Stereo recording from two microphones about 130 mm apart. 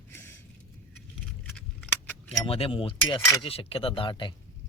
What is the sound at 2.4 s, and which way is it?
Speech, 45° left (ahead or behind).